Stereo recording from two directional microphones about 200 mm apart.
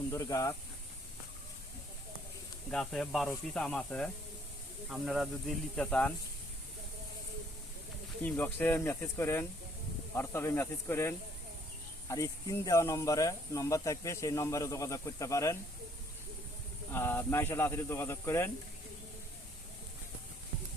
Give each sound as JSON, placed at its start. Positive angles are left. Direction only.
{"t": 0.1, "sound": "speech", "side_deg": 15}
{"t": 2.6, "sound": "speech", "side_deg": 0}
{"t": 8.2, "sound": "speech", "side_deg": 10}
{"t": 16.9, "sound": "speech", "side_deg": 10}